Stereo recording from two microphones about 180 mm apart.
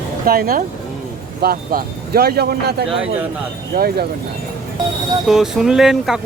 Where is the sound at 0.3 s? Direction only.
55° right (ahead or behind).